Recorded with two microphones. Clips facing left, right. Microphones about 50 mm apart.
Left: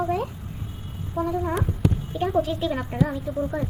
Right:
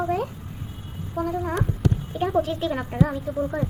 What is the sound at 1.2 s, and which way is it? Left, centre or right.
Speech, right.